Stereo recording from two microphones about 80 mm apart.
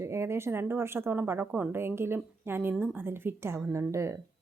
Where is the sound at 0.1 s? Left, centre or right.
Right.